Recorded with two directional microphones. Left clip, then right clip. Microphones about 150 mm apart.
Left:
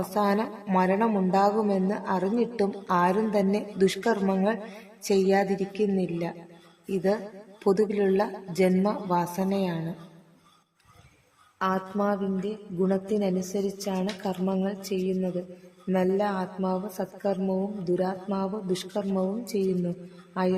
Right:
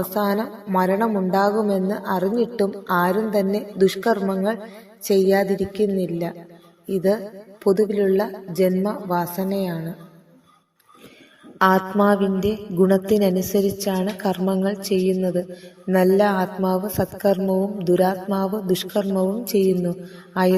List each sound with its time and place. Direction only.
0.0 s a woman's voice: 20° right (ahead or behind)
11.6 s a woman's voice: 45° right (ahead or behind)